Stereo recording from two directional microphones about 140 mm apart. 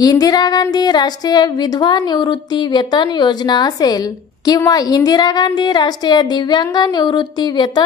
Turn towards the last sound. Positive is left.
turn(degrees=30)  # may be behind; listen again after turning